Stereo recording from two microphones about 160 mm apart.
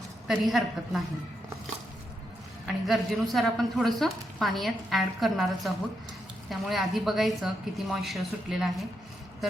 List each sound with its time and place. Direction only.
0.3 s a woman's voice: centre (ahead or behind)
2.6 s a woman's voice: centre (ahead or behind)